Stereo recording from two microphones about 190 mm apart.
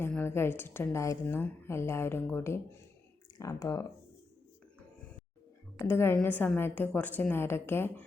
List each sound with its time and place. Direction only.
0.0 s a woman's voice: 10° left (ahead or behind)
5.8 s a woman's voice: 15° left (ahead or behind)